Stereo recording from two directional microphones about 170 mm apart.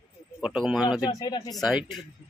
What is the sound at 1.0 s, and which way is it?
Speech, 25° left (ahead or behind).